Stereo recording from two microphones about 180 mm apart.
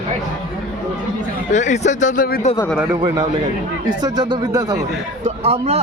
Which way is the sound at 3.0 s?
25° right (ahead or behind).